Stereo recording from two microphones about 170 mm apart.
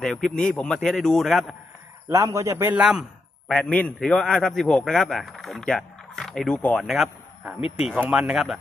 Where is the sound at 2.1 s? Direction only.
15° right (ahead or behind).